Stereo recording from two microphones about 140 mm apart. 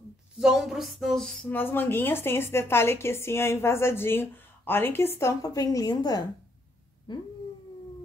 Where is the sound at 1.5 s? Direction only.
15° left (ahead or behind).